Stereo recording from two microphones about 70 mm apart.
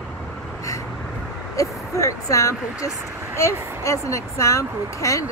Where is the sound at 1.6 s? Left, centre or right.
Left.